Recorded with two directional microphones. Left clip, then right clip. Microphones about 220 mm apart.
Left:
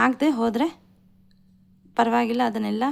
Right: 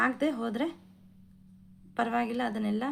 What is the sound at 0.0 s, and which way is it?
Speech, 40° left (ahead or behind).